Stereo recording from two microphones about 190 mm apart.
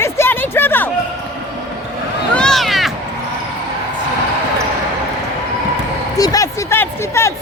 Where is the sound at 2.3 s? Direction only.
5° left (ahead or behind).